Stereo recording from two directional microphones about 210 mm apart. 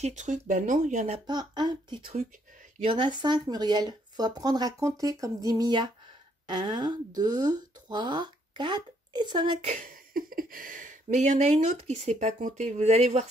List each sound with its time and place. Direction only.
0.0 s speech: 35° right (ahead or behind); by 9.5 s 20° right (ahead or behind)
9.7 s speech: 40° right (ahead or behind)